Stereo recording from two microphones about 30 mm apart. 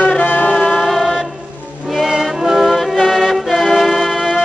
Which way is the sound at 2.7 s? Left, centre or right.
Centre.